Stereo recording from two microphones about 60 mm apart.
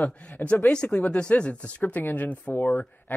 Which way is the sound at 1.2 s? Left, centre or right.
Centre.